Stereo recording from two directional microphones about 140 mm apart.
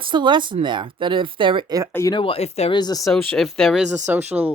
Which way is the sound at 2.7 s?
30° left (ahead or behind).